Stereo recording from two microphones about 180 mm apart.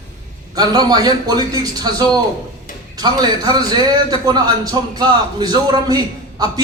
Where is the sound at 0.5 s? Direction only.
20° right (ahead or behind).